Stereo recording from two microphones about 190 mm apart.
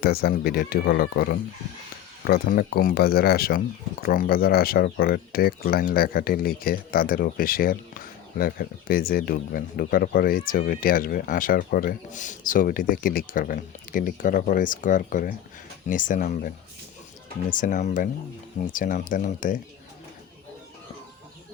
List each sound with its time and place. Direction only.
0.0 s speech: 55° left (ahead or behind)